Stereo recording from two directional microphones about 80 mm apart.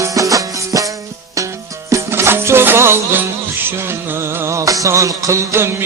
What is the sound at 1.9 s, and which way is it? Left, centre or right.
Music, right.